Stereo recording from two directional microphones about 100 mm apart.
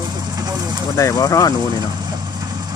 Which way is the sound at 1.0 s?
35° left (ahead or behind).